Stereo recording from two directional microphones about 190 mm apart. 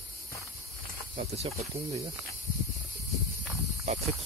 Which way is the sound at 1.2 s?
35° right (ahead or behind).